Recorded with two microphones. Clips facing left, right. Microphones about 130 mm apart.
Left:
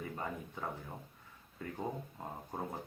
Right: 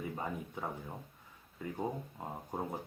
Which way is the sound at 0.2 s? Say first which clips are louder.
Right 2 dB; 15° right (ahead or behind).